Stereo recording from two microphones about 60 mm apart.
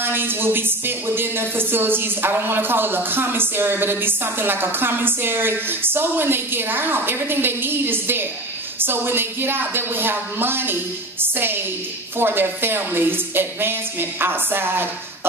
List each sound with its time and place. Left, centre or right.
0.0 s speech: right